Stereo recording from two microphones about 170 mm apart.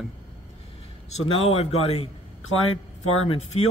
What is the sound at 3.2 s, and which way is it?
Speech, 40° left (ahead or behind).